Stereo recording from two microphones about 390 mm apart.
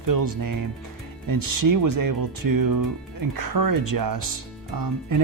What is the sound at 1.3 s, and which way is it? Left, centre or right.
Speech, right.